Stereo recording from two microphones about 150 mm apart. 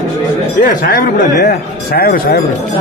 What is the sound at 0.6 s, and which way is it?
Speech, 60° left (ahead or behind).